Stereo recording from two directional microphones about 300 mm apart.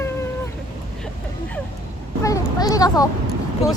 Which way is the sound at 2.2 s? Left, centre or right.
Centre.